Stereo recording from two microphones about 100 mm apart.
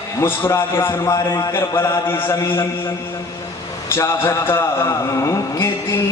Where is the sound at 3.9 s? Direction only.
25° left (ahead or behind).